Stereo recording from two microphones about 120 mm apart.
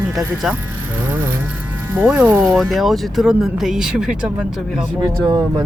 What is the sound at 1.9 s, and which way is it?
Speech, 10° right (ahead or behind).